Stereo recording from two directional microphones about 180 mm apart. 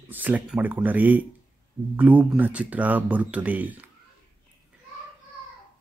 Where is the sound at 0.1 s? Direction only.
10° right (ahead or behind).